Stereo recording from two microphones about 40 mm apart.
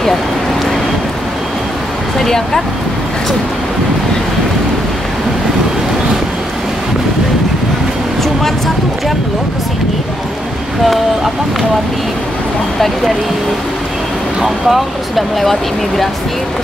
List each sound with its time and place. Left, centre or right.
2.2 s speech: centre
14.4 s speech: centre